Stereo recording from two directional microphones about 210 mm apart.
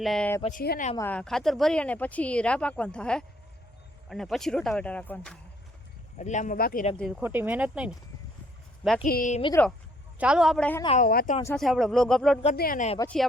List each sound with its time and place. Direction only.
0.0 s speech: 5° left (ahead or behind)
0.6 s speech: 45° left (ahead or behind)
0.9 s speech: 10° left (ahead or behind)
6.1 s speech: 35° left (ahead or behind)
7.2 s speech: 10° right (ahead or behind)
9.0 s speech: 40° left (ahead or behind)
10.2 s speech: 5° right (ahead or behind)
10.8 s speech: 35° left (ahead or behind)
11.5 s speech: centre (ahead or behind)
12.5 s speech: 40° left (ahead or behind)